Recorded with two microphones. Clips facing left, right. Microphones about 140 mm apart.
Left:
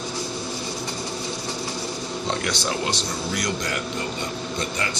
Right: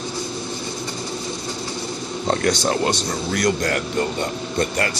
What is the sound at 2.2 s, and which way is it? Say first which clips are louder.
Speech: right 8 dB; 45° right (ahead or behind).